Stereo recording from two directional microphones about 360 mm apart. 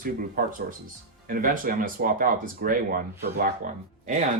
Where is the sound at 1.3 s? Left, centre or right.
Right.